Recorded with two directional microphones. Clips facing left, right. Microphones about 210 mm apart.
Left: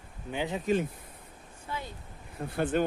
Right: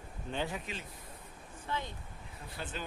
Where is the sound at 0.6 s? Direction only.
50° left (ahead or behind).